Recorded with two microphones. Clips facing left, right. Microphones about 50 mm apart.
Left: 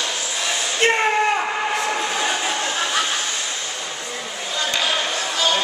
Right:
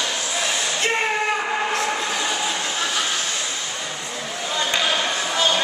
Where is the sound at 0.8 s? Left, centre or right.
Left.